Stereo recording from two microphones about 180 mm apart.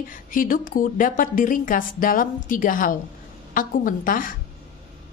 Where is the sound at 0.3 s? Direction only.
50° left (ahead or behind).